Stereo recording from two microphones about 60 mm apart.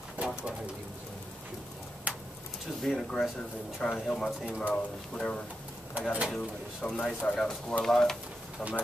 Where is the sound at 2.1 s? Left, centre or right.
Right.